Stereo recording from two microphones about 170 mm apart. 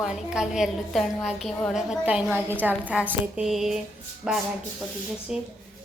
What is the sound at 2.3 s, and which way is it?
Speech, 10° left (ahead or behind).